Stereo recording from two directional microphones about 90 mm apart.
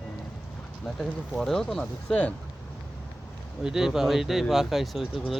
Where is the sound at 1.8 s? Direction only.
15° left (ahead or behind).